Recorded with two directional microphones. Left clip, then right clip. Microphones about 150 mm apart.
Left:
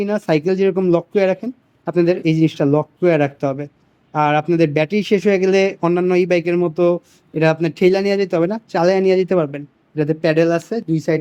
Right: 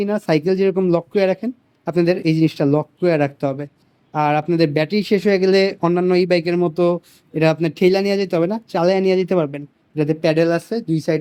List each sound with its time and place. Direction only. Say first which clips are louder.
0.0 s speech: left 1 dB; 10° right (ahead or behind)